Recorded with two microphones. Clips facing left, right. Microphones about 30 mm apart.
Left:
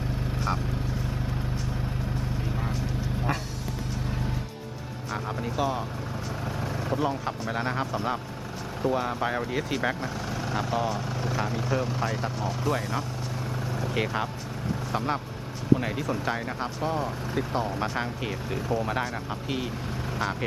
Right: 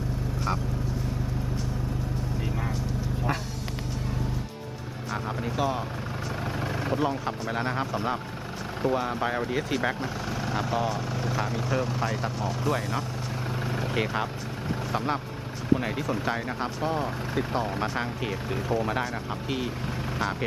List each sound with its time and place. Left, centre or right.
0.5 s speech: centre
3.3 s vehicle: centre
5.1 s speech: centre
6.6 s vehicle: right
6.9 s speech: centre
13.7 s vehicle: right
13.9 s speech: centre